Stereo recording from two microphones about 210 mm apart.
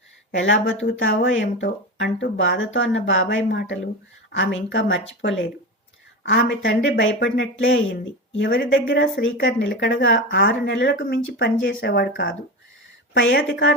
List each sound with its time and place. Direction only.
0.3 s speech: 60° left (ahead or behind)